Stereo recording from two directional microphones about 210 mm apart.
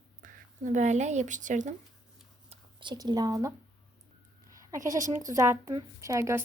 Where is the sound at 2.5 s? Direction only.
20° right (ahead or behind).